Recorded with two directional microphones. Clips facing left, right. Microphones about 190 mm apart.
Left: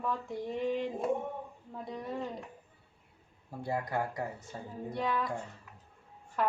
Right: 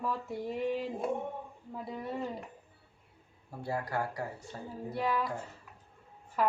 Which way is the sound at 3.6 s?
20° left (ahead or behind).